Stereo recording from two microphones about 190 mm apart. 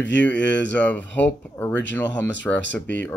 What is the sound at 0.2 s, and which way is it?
Speech, 10° left (ahead or behind).